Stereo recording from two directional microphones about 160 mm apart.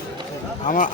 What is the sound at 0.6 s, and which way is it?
Speech, 55° left (ahead or behind).